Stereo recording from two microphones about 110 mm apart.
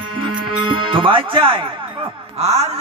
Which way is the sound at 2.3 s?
75° right (ahead or behind).